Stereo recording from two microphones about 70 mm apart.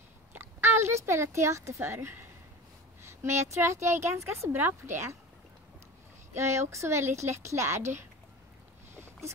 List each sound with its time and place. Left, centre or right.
0.3 s speech: right
6.3 s speech: right
8.9 s a sound: right